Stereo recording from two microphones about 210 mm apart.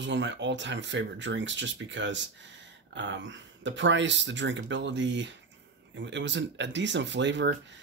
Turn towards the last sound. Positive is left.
turn(degrees=-60)  # may be behind; listen again after turning